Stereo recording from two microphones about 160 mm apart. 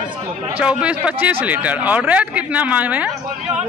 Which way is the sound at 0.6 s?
5° right (ahead or behind).